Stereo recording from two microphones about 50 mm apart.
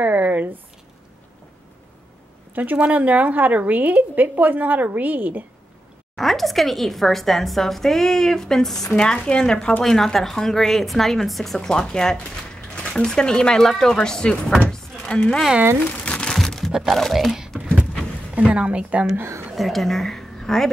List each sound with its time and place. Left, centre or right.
0.0 s a sound: right
2.5 s a woman's voice: right
6.1 s a woman's voice: centre
16.0 s crumpling: left
16.3 s a sound: centre
16.8 s a woman's voice: centre
18.5 s a woman's voice: right
19.5 s a woman's voice: centre